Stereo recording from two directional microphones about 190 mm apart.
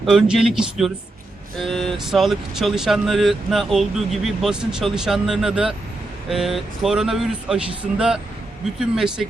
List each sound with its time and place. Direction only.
0.0 s speech: centre (ahead or behind)